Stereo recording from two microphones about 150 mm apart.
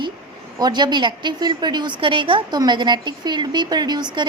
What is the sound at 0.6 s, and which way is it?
A woman's voice, 30° right (ahead or behind).